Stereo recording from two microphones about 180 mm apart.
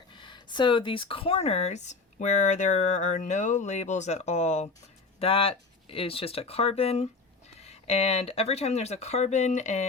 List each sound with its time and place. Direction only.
0.1 s speech: 25° left (ahead or behind)